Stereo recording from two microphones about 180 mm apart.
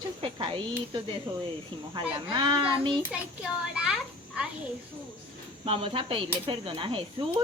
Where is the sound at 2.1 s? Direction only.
25° right (ahead or behind).